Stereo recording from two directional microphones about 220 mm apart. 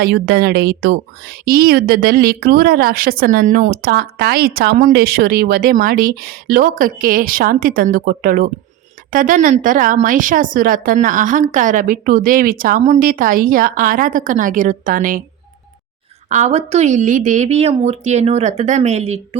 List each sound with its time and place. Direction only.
0.0 s a woman's voice: 50° right (ahead or behind)
16.3 s speech: 30° right (ahead or behind)